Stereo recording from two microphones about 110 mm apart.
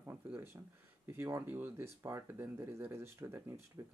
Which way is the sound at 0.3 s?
20° right (ahead or behind).